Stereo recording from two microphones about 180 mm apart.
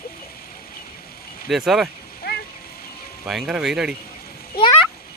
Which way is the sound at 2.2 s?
60° left (ahead or behind).